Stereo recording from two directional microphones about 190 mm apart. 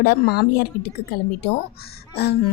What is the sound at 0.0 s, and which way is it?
A woman's voice, 55° left (ahead or behind).